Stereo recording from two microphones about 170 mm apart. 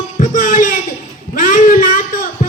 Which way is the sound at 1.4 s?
50° left (ahead or behind).